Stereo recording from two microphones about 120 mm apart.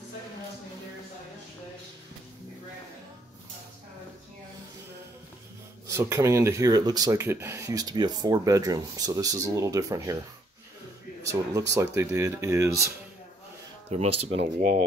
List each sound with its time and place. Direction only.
5.9 s speech: 20° right (ahead or behind)
11.2 s speech: 25° right (ahead or behind)
13.8 s speech: 60° right (ahead or behind); by 14.9 s 90° right